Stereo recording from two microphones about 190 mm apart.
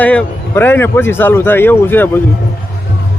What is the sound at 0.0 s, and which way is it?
A man's voice, 10° left (ahead or behind).